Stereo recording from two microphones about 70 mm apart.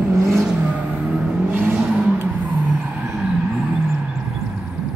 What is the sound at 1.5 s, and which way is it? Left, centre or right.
Vehicle, right.